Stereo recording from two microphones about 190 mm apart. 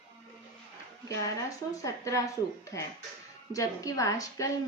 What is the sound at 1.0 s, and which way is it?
A woman's voice, 20° left (ahead or behind).